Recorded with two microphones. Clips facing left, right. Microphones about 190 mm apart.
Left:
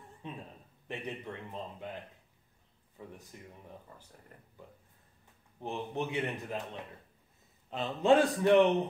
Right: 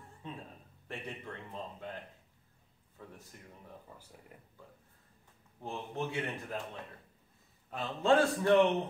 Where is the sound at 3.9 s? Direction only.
10° right (ahead or behind).